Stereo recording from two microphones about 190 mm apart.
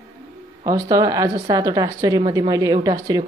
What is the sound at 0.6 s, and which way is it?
A man's voice, 20° right (ahead or behind).